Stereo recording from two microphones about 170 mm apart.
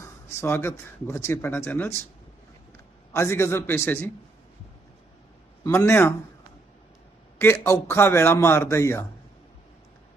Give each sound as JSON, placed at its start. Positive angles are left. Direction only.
{"t": 0.0, "sound": "speech", "side_deg": 15}
{"t": 3.1, "sound": "speech", "side_deg": 15}
{"t": 5.6, "sound": "speech", "side_deg": 15}
{"t": 7.3, "sound": "speech", "side_deg": 15}